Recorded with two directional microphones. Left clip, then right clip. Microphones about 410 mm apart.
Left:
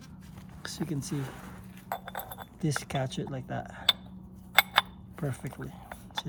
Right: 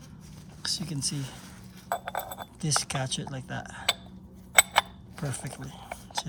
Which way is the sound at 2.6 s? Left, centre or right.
Centre.